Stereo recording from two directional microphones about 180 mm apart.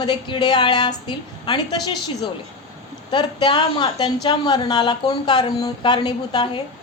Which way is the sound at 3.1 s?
25° left (ahead or behind).